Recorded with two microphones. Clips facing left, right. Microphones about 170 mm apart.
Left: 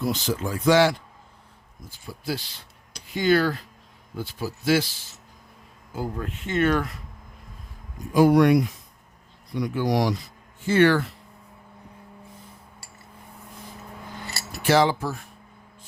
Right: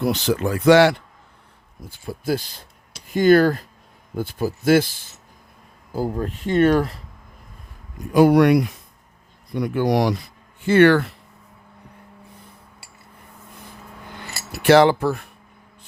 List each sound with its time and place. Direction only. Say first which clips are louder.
0.0 s speech: right 5 dB; 65° right (ahead or behind); by 5.0 s 50° right (ahead or behind)
5.9 s speech: right 6 dB; 35° right (ahead or behind)
8.1 s speech: right 3 dB; 65° right (ahead or behind)
9.5 s speech: right 4 dB; 55° right (ahead or behind)
14.2 s cutlery: right 3 dB; 65° right (ahead or behind)